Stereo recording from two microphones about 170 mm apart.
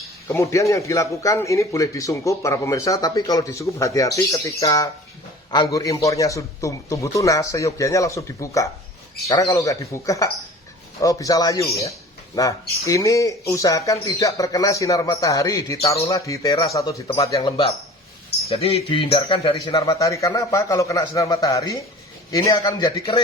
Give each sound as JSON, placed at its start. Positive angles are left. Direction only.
{"t": 0.3, "sound": "speech", "side_deg": 20}
{"t": 18.4, "sound": "speech", "side_deg": 35}
{"t": 19.7, "sound": "speech", "side_deg": 20}